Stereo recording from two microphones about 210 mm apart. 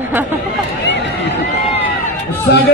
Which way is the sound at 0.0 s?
10° right (ahead or behind).